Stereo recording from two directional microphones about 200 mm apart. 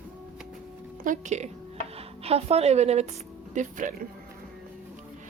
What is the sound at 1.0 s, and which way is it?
A woman's voice, 35° right (ahead or behind).